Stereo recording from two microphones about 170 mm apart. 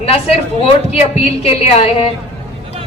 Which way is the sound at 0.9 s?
35° left (ahead or behind).